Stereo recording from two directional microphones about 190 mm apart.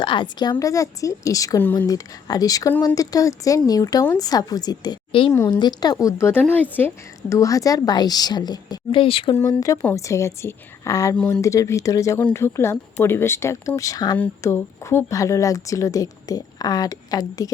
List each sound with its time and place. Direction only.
0.0 s a woman's voice: 25° left (ahead or behind)
9.4 s a woman's voice: 20° left (ahead or behind)